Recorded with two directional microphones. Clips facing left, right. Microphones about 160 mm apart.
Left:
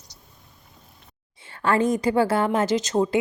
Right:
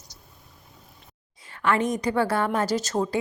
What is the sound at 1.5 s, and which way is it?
A woman's voice, 30° left (ahead or behind).